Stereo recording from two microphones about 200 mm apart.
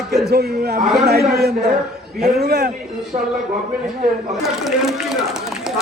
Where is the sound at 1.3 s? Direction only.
50° right (ahead or behind).